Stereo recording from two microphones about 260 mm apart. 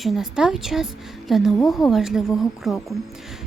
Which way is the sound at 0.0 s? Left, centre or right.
Centre.